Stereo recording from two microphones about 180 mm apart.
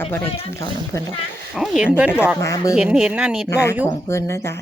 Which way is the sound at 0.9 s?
15° left (ahead or behind).